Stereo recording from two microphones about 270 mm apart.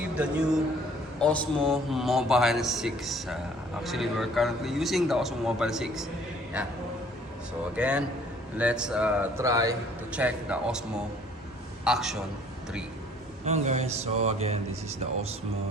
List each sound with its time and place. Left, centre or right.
0.2 s a man's voice: centre
7.8 s a man's voice: centre
13.4 s speech: right